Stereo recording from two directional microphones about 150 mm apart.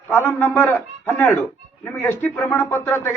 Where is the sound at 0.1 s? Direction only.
15° left (ahead or behind).